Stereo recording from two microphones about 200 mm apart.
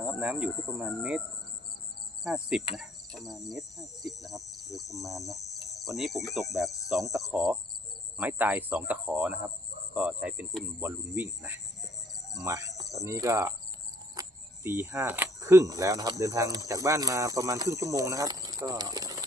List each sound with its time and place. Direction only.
0.0 s cricket: 5° right (ahead or behind)
2.2 s cricket: 5° right (ahead or behind)
12.3 s speech: 15° right (ahead or behind)
12.9 s cricket: 15° right (ahead or behind)
14.2 s speech: 10° right (ahead or behind)